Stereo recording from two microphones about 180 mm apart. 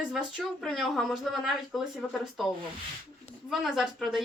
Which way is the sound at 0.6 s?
Centre (ahead or behind).